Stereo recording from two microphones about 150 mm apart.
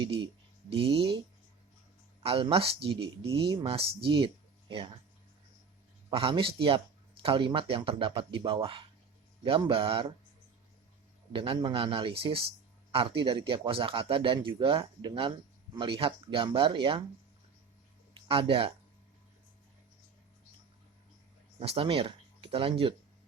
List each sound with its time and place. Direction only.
0.7 s a man's voice: 40° right (ahead or behind)
2.2 s a man's voice: 40° right (ahead or behind)
6.1 s a man's voice: 35° right (ahead or behind)
11.3 s a man's voice: 35° right (ahead or behind)
18.3 s a man's voice: 35° right (ahead or behind)
21.6 s speech: 40° right (ahead or behind)